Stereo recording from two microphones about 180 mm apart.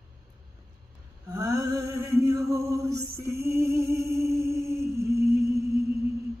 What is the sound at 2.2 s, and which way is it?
Music, 15° right (ahead or behind).